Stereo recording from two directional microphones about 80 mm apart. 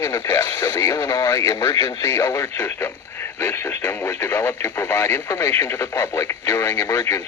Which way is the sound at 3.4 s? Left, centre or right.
Left.